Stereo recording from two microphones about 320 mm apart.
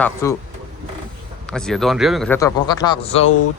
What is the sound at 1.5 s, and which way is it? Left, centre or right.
A man's voice, centre.